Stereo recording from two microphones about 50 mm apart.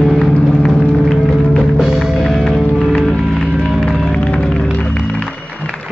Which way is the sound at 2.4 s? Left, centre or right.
Centre.